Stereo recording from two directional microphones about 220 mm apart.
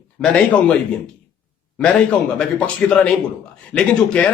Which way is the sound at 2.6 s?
5° left (ahead or behind).